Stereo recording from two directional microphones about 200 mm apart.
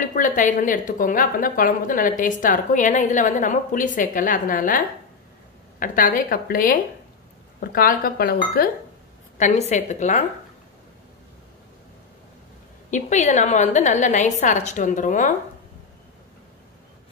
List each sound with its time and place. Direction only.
0.0 s a woman's voice: 40° left (ahead or behind)
9.4 s a woman's voice: 35° left (ahead or behind)
12.9 s a woman's voice: 35° left (ahead or behind)